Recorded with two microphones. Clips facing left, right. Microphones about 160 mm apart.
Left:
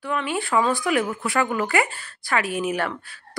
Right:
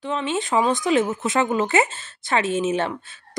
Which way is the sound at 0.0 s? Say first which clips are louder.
Right 1 dB; 20° right (ahead or behind).